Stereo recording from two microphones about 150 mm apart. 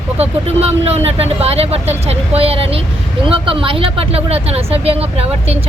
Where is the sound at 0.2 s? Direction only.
45° right (ahead or behind).